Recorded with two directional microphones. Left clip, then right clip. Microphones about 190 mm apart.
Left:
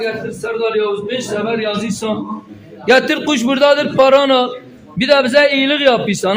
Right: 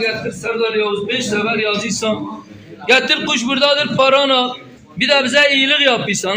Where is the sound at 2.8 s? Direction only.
75° left (ahead or behind).